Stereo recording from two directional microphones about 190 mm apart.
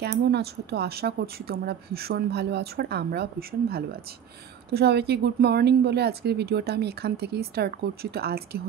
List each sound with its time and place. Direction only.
0.0 s a woman's voice: 60° right (ahead or behind)